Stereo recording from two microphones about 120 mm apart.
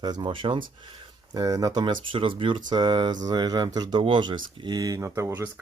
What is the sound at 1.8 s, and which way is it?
Speech, 45° right (ahead or behind).